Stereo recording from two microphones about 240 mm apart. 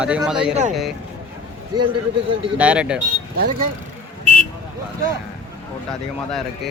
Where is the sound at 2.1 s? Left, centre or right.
Right.